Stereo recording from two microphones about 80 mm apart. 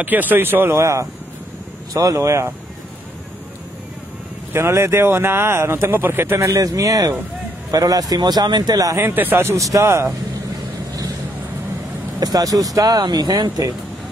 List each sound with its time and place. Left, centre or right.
0.0 s speech: right
4.5 s speech: right
6.4 s speech: right
9.0 s speech: right
12.2 s speech: right